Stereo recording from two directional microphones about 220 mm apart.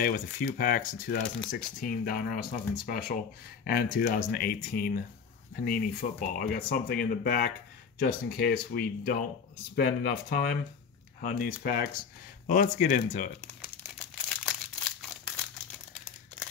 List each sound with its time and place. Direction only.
0.0 s speech: 40° left (ahead or behind)
13.9 s crumpling: 5° left (ahead or behind)